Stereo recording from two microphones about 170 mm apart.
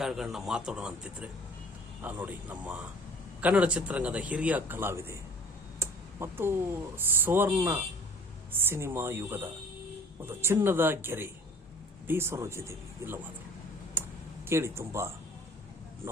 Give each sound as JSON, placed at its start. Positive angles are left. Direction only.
{"t": 0.0, "sound": "a man's voice", "side_deg": 0}
{"t": 14.0, "sound": "computer keyboard", "side_deg": -15}
{"t": 14.4, "sound": "a man's voice", "side_deg": -15}